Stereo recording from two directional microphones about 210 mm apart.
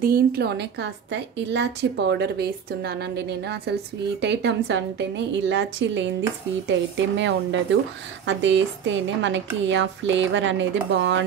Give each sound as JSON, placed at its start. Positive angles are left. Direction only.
{"t": 0.0, "sound": "a woman's voice", "side_deg": -45}